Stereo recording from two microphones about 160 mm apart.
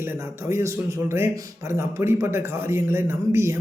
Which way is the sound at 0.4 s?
20° right (ahead or behind).